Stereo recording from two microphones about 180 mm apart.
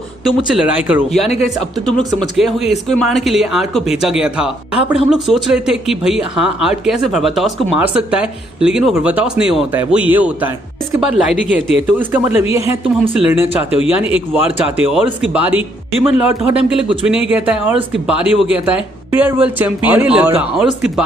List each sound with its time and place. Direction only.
0.3 s speech: 5° right (ahead or behind)